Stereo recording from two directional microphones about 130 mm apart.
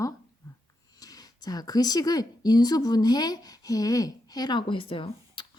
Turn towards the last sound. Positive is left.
turn(degrees=40)  # may be behind; listen again after turning